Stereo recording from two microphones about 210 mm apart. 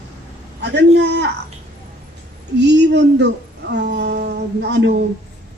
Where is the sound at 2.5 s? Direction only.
55° right (ahead or behind).